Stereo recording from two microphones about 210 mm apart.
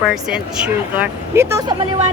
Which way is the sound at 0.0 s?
Centre (ahead or behind).